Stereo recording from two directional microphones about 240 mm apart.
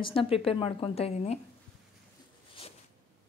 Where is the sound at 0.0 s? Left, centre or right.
Left.